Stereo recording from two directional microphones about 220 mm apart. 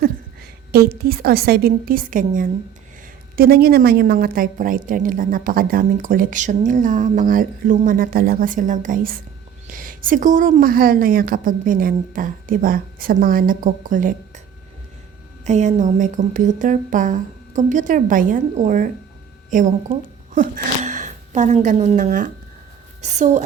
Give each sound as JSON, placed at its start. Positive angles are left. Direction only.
{"t": 0.7, "sound": "a woman's voice", "side_deg": -45}
{"t": 15.4, "sound": "a woman's voice", "side_deg": -30}